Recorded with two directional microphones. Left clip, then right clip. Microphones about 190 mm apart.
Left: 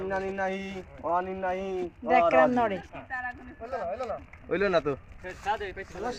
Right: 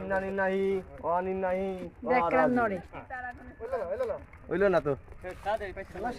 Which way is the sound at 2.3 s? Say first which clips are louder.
Left 3 dB; centre (ahead or behind).